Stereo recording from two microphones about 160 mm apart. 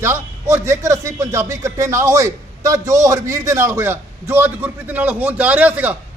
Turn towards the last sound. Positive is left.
turn(degrees=-10)  # may be behind; listen again after turning